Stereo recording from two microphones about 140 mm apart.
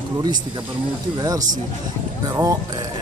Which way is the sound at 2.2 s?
25° right (ahead or behind).